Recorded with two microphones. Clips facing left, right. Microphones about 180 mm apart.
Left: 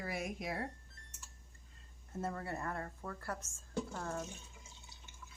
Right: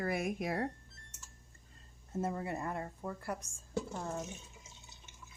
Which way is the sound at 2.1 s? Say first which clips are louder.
Right 4 dB; 20° right (ahead or behind).